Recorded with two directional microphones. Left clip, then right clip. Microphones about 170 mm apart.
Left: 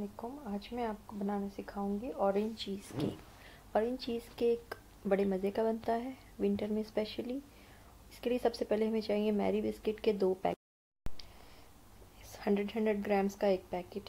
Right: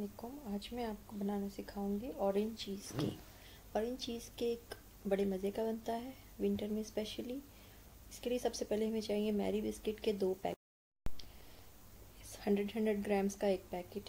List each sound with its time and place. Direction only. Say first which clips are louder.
0.2 s a woman's voice: left 4 dB; 10° left (ahead or behind)
12.3 s a woman's voice: left 3 dB; 10° left (ahead or behind)